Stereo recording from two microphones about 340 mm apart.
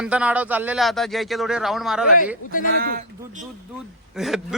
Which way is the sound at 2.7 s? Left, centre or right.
Right.